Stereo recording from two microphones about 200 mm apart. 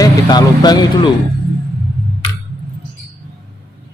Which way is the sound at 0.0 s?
20° left (ahead or behind).